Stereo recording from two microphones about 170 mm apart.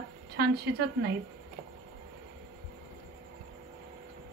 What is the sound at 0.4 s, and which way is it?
Speech, 70° right (ahead or behind).